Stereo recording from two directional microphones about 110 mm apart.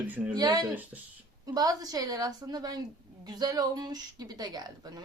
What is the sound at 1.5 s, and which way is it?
Speech, 35° right (ahead or behind).